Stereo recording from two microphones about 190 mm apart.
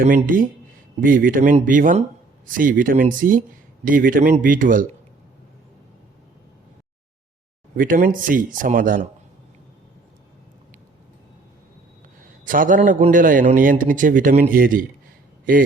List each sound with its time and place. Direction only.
0.1 s a man's voice: 45° right (ahead or behind)
7.8 s a man's voice: 45° right (ahead or behind)
12.5 s a man's voice: 45° right (ahead or behind)